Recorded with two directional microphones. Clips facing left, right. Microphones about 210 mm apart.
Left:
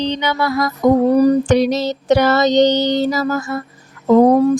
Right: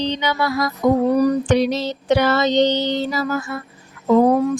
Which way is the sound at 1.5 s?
40° left (ahead or behind).